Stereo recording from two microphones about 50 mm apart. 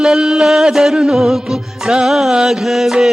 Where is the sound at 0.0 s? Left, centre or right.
Centre.